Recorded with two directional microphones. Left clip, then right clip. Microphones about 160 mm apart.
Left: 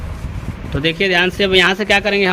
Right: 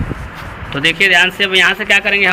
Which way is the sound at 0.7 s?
70° left (ahead or behind).